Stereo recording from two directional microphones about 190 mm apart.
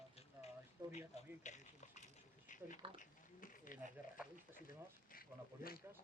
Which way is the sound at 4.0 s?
10° right (ahead or behind).